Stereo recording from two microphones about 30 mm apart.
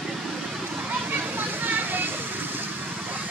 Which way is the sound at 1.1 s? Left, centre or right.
Right.